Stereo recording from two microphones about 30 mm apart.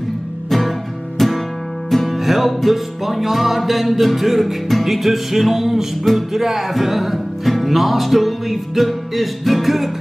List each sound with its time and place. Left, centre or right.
0.5 s music: centre